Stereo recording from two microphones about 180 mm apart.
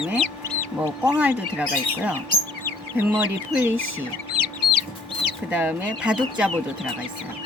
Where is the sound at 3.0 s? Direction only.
10° right (ahead or behind).